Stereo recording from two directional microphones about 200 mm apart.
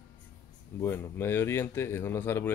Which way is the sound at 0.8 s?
10° left (ahead or behind).